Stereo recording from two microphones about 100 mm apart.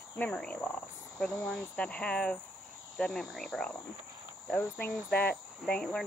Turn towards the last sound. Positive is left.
turn(degrees=10)  # may be behind; listen again after turning